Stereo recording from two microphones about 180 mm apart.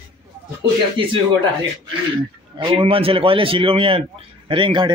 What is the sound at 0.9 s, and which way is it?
A man's voice, 30° right (ahead or behind).